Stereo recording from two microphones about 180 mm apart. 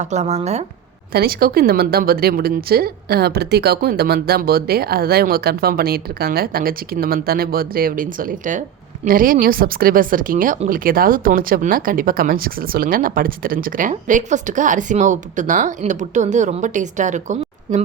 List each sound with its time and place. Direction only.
0.0 s speech: 40° right (ahead or behind)
1.1 s a woman's voice: 55° right (ahead or behind); by 17.8 s 40° right (ahead or behind)